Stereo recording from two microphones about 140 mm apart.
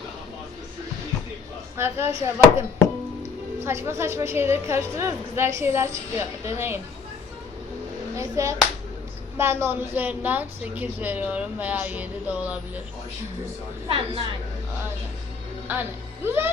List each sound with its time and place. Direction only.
1.7 s a woman's voice: 15° right (ahead or behind)
8.1 s a woman's voice: 20° right (ahead or behind)
13.8 s a woman's voice: 40° right (ahead or behind)
15.6 s a woman's voice: 15° right (ahead or behind)